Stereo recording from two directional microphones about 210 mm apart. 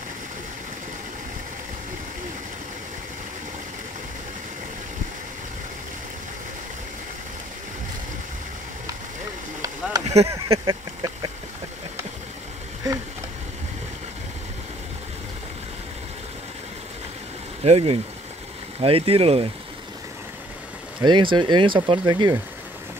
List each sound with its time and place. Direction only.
10.0 s a sound: 30° right (ahead or behind)
17.6 s speech: 30° right (ahead or behind)
21.0 s speech: 20° right (ahead or behind)